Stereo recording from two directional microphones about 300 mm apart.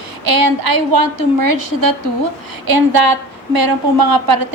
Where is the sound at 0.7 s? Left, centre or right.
Right.